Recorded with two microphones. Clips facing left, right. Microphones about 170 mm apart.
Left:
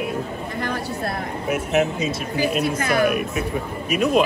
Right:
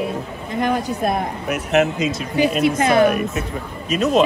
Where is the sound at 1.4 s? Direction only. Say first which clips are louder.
Right 2 dB; 70° right (ahead or behind).